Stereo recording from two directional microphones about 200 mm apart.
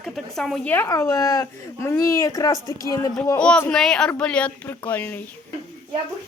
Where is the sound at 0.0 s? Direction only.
Centre (ahead or behind); by 3.1 s 15° left (ahead or behind).